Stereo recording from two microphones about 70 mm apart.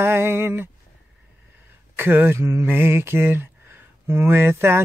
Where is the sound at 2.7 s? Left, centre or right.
Right.